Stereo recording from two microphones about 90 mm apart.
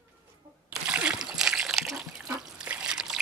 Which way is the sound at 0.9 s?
10° right (ahead or behind).